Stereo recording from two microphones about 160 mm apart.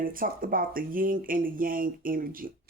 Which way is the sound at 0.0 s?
60° right (ahead or behind).